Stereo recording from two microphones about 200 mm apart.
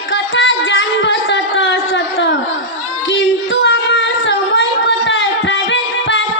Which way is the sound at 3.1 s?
70° left (ahead or behind).